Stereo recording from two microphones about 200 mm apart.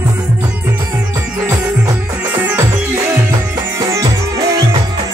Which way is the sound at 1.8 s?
10° right (ahead or behind).